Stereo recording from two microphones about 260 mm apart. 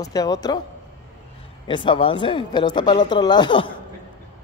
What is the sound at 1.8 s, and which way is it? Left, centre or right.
Speech, centre.